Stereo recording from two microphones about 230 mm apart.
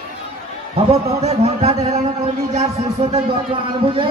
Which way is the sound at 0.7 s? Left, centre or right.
Right.